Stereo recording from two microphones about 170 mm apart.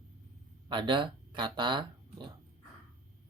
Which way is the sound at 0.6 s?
25° right (ahead or behind).